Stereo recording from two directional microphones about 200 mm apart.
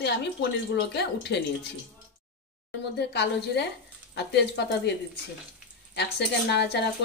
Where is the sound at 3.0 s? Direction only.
55° left (ahead or behind).